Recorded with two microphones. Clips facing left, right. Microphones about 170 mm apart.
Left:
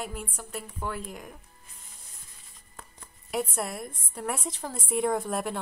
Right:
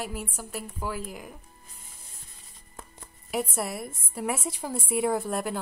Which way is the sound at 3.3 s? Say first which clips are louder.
Right 1 dB; 5° right (ahead or behind).